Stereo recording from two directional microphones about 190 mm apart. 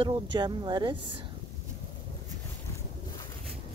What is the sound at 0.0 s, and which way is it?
Speech, 25° right (ahead or behind).